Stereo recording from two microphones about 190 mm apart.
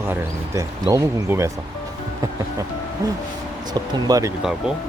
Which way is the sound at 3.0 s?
20° right (ahead or behind).